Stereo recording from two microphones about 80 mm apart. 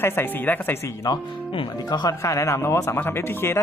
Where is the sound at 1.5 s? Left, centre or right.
Left.